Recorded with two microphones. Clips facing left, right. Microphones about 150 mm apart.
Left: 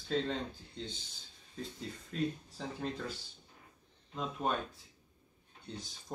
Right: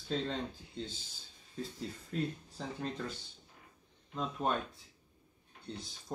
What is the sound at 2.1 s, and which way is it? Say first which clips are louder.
Speech: left 2 dB; centre (ahead or behind).